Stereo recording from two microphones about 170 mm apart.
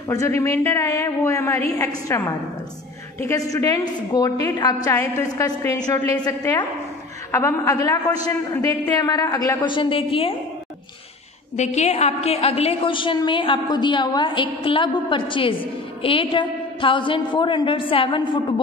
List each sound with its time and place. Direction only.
0.1 s a woman's voice: 15° left (ahead or behind)
3.2 s a woman's voice: 20° left (ahead or behind)
11.5 s a woman's voice: 40° left (ahead or behind)